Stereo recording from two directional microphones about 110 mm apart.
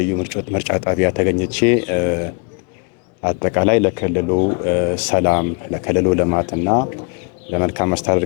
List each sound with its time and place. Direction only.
0.0 s speech: 15° left (ahead or behind)
3.2 s speech: 20° left (ahead or behind)